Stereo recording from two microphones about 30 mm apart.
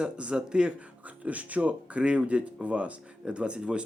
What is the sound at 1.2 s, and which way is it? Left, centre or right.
Speech, right.